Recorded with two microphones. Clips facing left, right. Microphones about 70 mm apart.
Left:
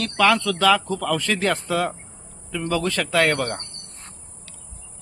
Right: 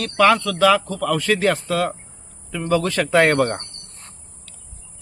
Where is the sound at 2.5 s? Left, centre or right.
Centre.